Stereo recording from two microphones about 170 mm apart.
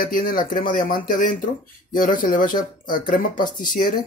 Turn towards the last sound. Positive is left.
turn(degrees=55)  # may be behind; listen again after turning